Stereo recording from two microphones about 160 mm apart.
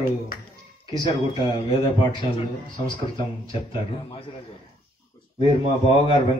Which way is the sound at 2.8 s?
35° left (ahead or behind).